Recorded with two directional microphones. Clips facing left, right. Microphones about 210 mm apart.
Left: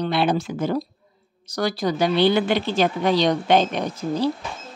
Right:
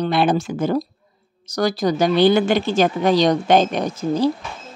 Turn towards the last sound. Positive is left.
turn(degrees=-45)  # may be behind; listen again after turning